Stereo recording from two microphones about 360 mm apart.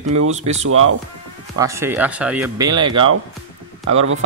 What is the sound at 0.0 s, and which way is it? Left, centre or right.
Speech, right.